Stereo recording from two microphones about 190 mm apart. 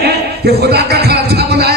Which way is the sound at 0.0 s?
55° right (ahead or behind).